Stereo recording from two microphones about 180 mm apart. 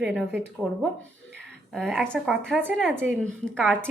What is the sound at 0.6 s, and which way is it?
A woman's voice, centre (ahead or behind).